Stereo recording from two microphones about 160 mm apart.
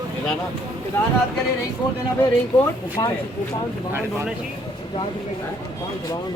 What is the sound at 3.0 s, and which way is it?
Speech, 25° left (ahead or behind).